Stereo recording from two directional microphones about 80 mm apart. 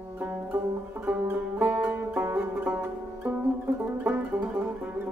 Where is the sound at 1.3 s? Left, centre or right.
Right.